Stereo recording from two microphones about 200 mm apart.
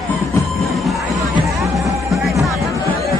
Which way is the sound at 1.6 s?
15° right (ahead or behind).